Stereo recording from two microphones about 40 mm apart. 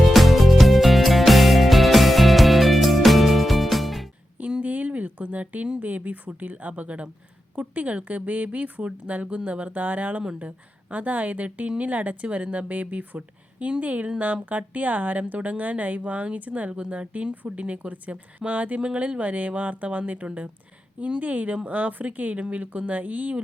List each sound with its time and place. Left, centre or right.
0.0 s music: centre
4.6 s a sound: right
5.8 s speech: right